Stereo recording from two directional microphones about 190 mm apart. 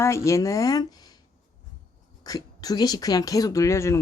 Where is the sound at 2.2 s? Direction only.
20° left (ahead or behind).